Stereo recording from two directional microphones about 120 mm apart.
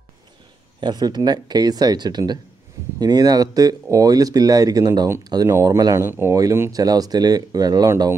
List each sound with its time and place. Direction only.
0.7 s speech: 35° right (ahead or behind)